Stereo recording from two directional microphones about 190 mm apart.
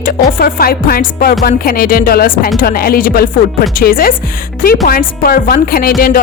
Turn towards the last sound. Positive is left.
turn(degrees=50)  # may be behind; listen again after turning